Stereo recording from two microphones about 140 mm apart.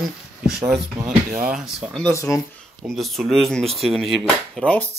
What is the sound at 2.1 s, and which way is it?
Speech, 25° left (ahead or behind).